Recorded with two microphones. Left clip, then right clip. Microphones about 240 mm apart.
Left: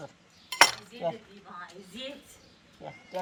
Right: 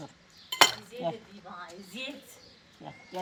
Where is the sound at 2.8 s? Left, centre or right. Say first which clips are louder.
Left 2 dB; left.